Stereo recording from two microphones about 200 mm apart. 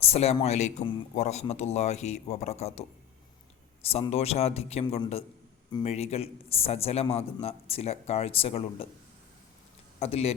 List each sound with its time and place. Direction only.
0.0 s a man's voice: 30° left (ahead or behind)
3.8 s a man's voice: 30° left (ahead or behind)
10.0 s a man's voice: 30° left (ahead or behind)